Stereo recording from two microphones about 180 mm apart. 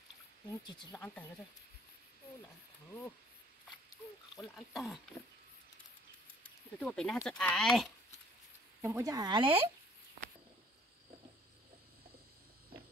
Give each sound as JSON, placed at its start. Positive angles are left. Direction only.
{"t": 0.7, "sound": "speech", "side_deg": 25}
{"t": 4.6, "sound": "speech", "side_deg": 0}
{"t": 6.4, "sound": "speech", "side_deg": 5}
{"t": 8.8, "sound": "a woman's voice", "side_deg": -20}